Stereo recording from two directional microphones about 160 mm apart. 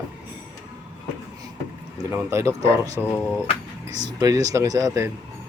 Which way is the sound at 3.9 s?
25° right (ahead or behind).